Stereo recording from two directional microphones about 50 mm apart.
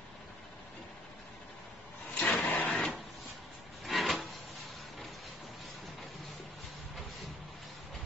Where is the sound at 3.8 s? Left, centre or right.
Centre.